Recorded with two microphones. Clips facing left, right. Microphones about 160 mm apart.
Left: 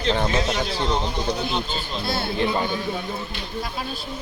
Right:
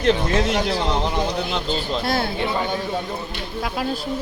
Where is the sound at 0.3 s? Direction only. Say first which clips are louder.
Right 3 dB; 65° right (ahead or behind).